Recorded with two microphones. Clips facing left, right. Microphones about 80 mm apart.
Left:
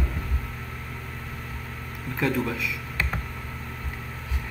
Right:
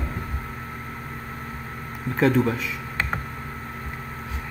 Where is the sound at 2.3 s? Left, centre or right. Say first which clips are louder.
Right 6 dB; right.